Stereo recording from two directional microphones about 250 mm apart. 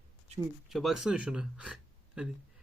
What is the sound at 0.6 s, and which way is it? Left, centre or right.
Speech, centre.